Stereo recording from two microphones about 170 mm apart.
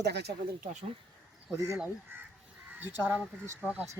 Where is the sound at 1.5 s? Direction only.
15° right (ahead or behind).